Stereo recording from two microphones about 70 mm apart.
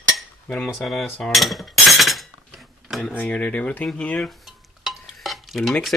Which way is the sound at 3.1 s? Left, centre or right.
Centre.